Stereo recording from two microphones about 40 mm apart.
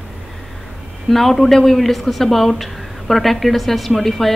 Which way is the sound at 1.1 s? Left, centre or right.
Centre.